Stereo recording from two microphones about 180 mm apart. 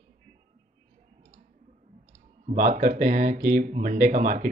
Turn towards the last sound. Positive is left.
turn(degrees=-50)  # may be behind; listen again after turning